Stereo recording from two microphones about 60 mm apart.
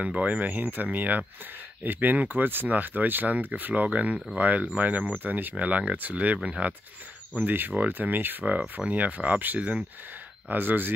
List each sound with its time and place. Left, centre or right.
0.0 s speech: right
7.4 s speech: right
10.5 s speech: right